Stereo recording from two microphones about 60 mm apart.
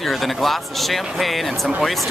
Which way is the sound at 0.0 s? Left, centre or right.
Centre.